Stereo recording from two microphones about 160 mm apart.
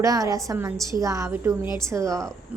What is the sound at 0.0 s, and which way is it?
A woman's voice, 20° right (ahead or behind).